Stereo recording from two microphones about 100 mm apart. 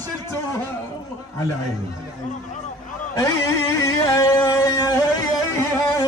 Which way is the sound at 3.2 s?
30° left (ahead or behind).